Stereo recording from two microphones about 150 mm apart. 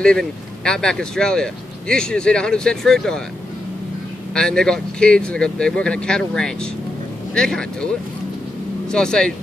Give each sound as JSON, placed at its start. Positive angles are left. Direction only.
{"t": 0.0, "sound": "speech", "side_deg": 5}
{"t": 4.3, "sound": "speech", "side_deg": 5}
{"t": 8.9, "sound": "speech", "side_deg": 5}